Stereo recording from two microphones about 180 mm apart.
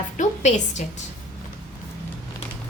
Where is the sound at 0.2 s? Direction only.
40° left (ahead or behind).